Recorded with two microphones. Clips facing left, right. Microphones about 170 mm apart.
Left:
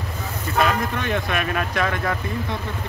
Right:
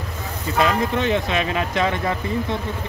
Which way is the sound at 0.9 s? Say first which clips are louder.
Right 4 dB; 20° right (ahead or behind).